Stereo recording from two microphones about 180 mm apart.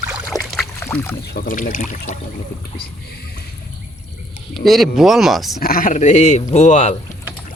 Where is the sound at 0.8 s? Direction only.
15° left (ahead or behind).